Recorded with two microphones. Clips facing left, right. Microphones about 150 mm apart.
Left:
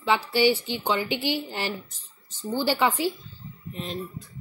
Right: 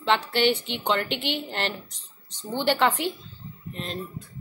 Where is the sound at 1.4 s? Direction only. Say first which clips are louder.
Right 1 dB; 10° left (ahead or behind).